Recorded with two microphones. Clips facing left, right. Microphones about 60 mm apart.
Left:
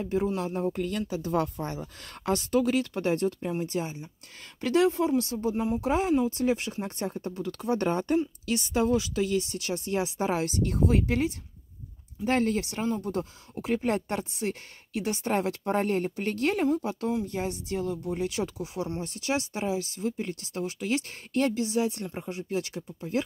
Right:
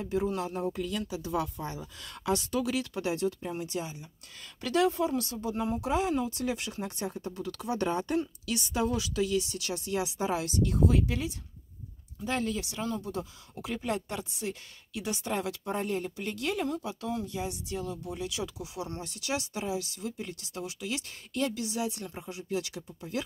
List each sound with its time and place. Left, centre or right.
0.7 s speech: left
16.6 s speech: left